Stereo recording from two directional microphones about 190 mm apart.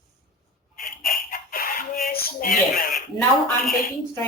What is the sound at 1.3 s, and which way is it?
Chicken, 50° left (ahead or behind).